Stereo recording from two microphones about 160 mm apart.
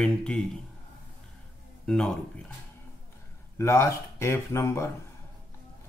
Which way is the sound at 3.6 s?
15° left (ahead or behind).